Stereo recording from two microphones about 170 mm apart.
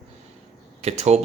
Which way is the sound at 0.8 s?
40° right (ahead or behind).